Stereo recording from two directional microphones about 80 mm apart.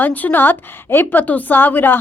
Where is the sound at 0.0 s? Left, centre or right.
Left.